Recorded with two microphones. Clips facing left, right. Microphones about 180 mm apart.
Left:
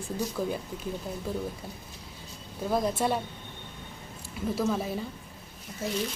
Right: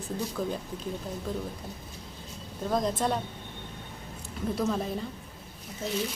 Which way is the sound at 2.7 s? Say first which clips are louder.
Left 1 dB; 10° left (ahead or behind).